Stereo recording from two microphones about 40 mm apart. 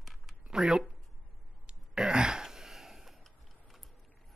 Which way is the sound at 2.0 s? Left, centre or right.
Right.